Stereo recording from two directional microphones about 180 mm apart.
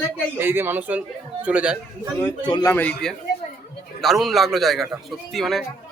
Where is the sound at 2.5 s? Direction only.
20° left (ahead or behind).